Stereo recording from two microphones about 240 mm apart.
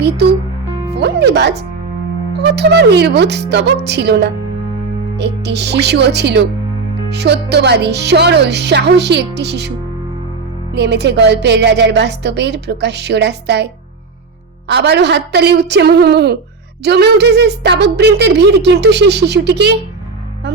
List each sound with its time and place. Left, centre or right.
0.9 s speech: right
10.8 s speech: right
14.7 s speech: right